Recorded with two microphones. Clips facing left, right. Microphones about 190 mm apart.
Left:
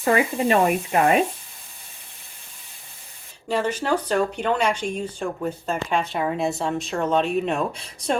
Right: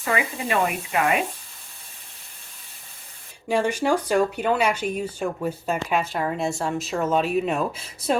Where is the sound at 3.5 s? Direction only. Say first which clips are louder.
Right 1 dB; 10° right (ahead or behind).